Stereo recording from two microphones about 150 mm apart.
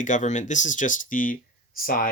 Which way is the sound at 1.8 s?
75° left (ahead or behind).